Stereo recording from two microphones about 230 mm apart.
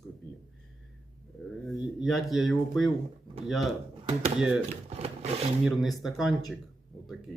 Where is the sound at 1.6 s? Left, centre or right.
Centre.